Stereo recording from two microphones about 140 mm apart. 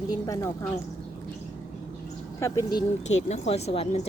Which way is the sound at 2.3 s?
20° left (ahead or behind).